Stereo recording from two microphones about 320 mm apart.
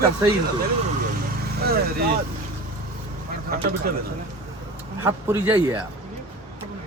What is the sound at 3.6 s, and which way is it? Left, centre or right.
Speech, right.